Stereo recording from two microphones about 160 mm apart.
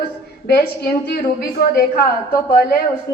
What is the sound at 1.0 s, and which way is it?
A woman's voice, 70° left (ahead or behind).